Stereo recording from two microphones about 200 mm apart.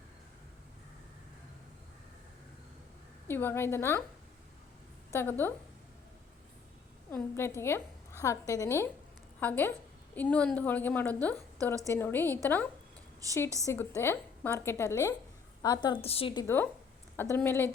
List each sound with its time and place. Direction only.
3.2 s a woman's voice: 10° left (ahead or behind)
5.1 s a woman's voice: 10° left (ahead or behind)
7.1 s a woman's voice: 10° left (ahead or behind)
13.7 s a woman's voice: 15° left (ahead or behind)